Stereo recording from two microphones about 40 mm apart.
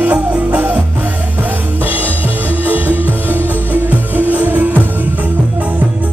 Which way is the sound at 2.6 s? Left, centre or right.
Right.